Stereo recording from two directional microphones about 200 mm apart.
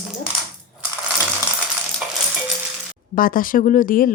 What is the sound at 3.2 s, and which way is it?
Speech, 45° left (ahead or behind).